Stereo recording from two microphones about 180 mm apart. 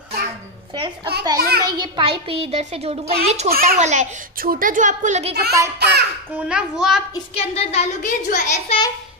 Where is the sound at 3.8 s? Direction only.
40° right (ahead or behind).